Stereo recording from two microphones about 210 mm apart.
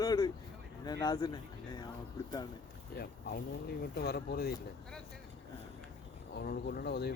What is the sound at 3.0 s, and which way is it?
Speech, 50° left (ahead or behind).